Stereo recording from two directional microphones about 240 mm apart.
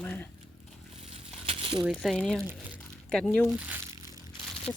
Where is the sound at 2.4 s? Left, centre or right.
Centre.